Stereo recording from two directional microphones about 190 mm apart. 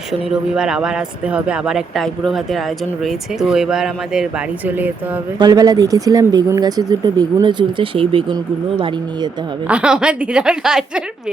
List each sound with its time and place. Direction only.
0.1 s speech: 5° right (ahead or behind)
5.4 s speech: 20° right (ahead or behind)
9.6 s speech: 5° right (ahead or behind)